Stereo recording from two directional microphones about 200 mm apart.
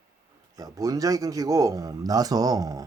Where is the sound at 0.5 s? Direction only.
15° right (ahead or behind).